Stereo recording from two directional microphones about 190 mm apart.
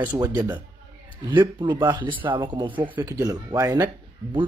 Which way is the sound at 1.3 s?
25° right (ahead or behind).